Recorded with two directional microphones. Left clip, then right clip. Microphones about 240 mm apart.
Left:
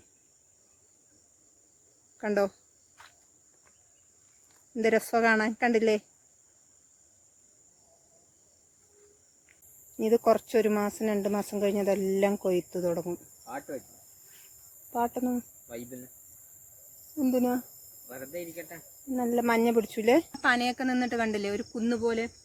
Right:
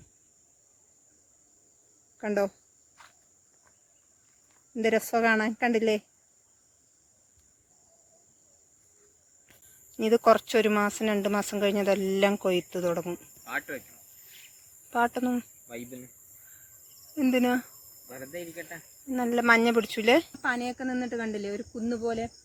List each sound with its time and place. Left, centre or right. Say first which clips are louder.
2.1 s speech: even; centre
4.7 s speech: even; centre
10.0 s speech: right 3 dB; centre
13.5 s speech: right 5 dB; right
14.9 s speech: right 3 dB; centre
17.2 s cricket: right 2 dB; centre
18.1 s speech: even; right
19.1 s speech: right 4 dB; centre
20.4 s speech: left 4 dB; left